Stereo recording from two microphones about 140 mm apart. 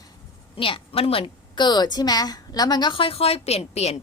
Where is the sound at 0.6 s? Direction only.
40° left (ahead or behind).